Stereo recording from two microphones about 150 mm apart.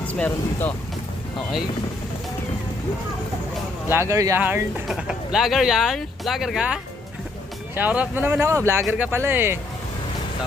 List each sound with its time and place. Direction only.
0.1 s speech: 10° left (ahead or behind)
3.9 s speech: 20° right (ahead or behind)
7.8 s speech: 10° right (ahead or behind)